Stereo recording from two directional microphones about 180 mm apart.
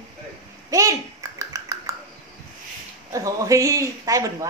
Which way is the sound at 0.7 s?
20° right (ahead or behind).